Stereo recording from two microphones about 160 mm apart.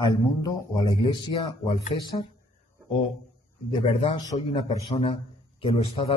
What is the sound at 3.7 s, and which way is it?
Speech, 35° left (ahead or behind).